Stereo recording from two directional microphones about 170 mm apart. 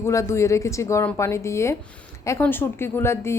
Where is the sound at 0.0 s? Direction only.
15° left (ahead or behind).